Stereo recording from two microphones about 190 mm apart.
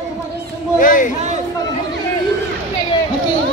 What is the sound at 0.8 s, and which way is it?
Speech, 45° left (ahead or behind).